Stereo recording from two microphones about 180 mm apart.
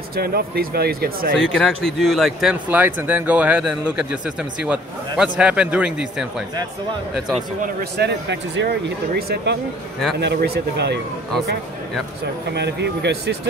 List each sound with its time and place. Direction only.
0.1 s speech: 55° right (ahead or behind); by 1.5 s 75° right (ahead or behind)
1.5 s speech: 5° left (ahead or behind)
8.0 s speech: 80° right
12.5 s speech: 70° right (ahead or behind)